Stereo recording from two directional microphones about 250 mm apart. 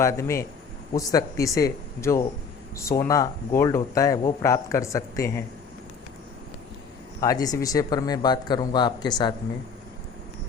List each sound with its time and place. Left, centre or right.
0.0 s speech: centre
7.2 s speech: centre